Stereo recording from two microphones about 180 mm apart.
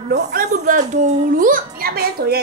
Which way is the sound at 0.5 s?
40° right (ahead or behind).